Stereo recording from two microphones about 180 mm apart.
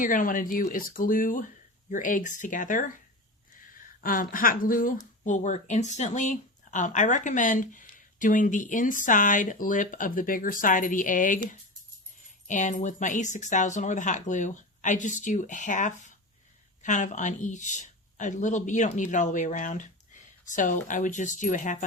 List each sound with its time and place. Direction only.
0.0 s speech: 50° left (ahead or behind)
12.5 s a woman's voice: 45° left (ahead or behind)